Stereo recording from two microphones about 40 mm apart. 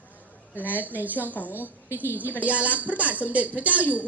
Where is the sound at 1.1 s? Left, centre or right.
Left.